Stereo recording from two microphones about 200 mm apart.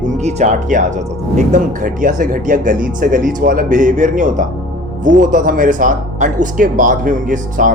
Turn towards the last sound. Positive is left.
turn(degrees=-40)  # may be behind; listen again after turning